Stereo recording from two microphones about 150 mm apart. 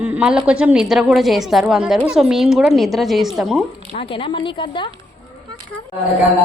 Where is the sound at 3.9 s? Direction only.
35° left (ahead or behind).